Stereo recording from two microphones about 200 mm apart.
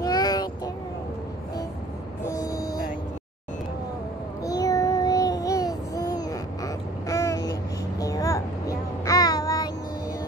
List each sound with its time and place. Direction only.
0.0 s child singing: 20° left (ahead or behind)
2.2 s vehicle: 15° left (ahead or behind)
4.5 s child singing: 15° left (ahead or behind)